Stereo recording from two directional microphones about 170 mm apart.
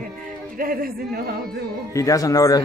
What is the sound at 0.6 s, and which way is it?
Speech, 60° right (ahead or behind).